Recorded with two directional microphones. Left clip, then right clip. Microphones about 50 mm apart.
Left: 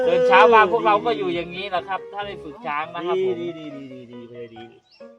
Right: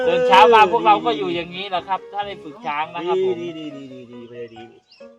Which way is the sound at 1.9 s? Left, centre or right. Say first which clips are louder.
Right 4 dB; left.